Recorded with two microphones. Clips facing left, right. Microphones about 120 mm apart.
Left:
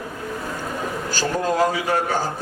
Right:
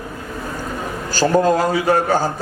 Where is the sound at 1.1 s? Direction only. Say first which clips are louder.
Right 6 dB; 35° right (ahead or behind).